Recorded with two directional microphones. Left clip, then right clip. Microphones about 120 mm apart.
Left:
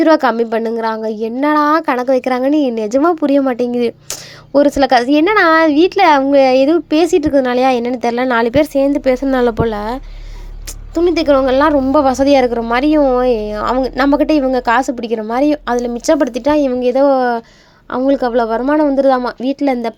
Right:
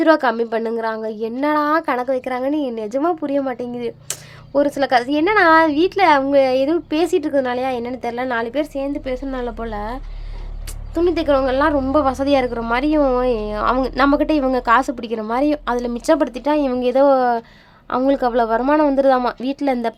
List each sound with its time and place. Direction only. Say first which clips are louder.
0.0 s a woman's voice: left 4 dB; 30° left (ahead or behind); by 10.0 s 50° left (ahead or behind)
10.9 s a woman's voice: left 5 dB; 35° left (ahead or behind)
16.8 s speech: even; 10° left (ahead or behind)